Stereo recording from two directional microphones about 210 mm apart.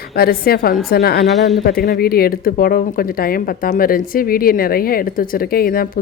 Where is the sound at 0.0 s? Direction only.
45° left (ahead or behind).